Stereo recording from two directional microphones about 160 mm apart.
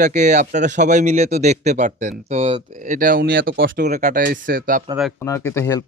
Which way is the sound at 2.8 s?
55° right (ahead or behind).